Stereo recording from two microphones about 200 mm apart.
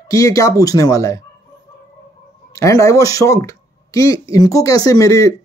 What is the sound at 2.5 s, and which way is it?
Speech, 15° left (ahead or behind).